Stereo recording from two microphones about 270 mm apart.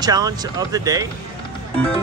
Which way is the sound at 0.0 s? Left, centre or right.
Centre.